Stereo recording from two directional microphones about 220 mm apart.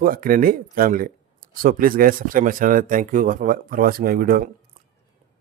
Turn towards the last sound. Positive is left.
turn(degrees=-40)  # may be behind; listen again after turning